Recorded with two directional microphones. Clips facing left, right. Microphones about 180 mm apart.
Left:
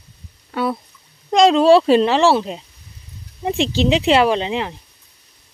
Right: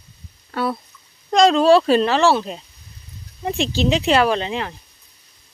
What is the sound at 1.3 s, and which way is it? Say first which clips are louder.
Speech: left 2 dB; 20° left (ahead or behind).